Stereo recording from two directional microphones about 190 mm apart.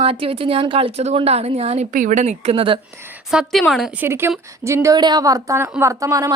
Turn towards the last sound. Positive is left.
turn(degrees=-20)  # may be behind; listen again after turning